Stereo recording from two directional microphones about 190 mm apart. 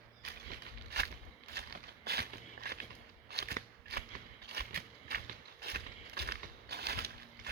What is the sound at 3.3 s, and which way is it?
Scissors, 55° right (ahead or behind).